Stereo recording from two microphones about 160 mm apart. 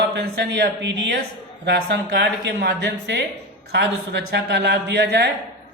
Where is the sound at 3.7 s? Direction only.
90° right.